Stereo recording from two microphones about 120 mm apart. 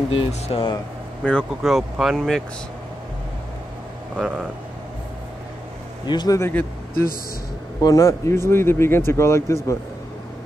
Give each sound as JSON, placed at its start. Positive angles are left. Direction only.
{"t": 0.3, "sound": "speech", "side_deg": 50}
{"t": 1.2, "sound": "speech", "side_deg": 5}
{"t": 4.2, "sound": "speech", "side_deg": 10}
{"t": 6.0, "sound": "speech", "side_deg": 35}
{"t": 7.8, "sound": "speech", "side_deg": 30}